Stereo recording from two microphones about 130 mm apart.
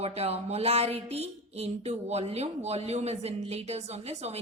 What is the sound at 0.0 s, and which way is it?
Speech, 50° right (ahead or behind).